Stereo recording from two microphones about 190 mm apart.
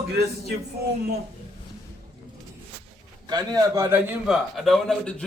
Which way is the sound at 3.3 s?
20° right (ahead or behind).